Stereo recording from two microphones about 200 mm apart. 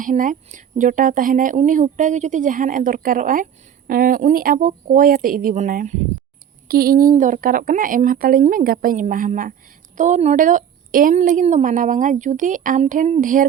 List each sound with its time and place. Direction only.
0.0 s speech: 40° right (ahead or behind)